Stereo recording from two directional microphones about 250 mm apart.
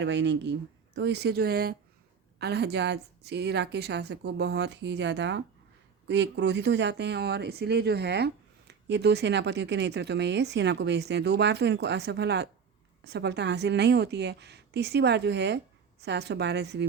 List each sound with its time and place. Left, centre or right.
0.0 s speech: right